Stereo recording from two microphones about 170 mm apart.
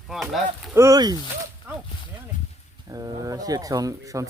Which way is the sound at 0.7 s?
20° right (ahead or behind).